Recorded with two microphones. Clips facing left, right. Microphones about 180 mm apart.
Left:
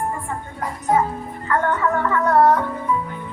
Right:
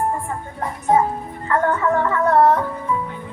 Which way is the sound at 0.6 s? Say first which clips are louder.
Right 2 dB; 30° right (ahead or behind).